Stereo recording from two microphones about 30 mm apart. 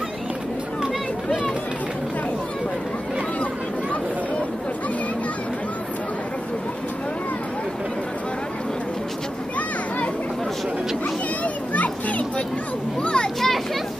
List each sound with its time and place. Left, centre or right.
11.4 s children playing: left
13.0 s children playing: left